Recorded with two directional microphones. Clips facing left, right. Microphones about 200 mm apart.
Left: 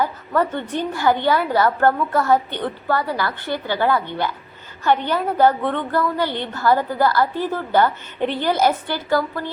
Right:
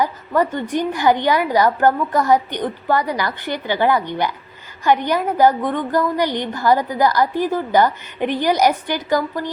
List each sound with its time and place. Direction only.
0.0 s a woman's voice: 15° right (ahead or behind)